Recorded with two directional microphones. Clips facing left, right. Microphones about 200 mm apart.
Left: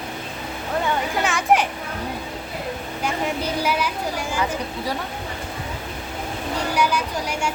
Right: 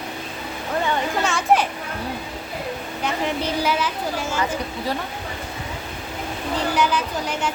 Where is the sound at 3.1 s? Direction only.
10° left (ahead or behind).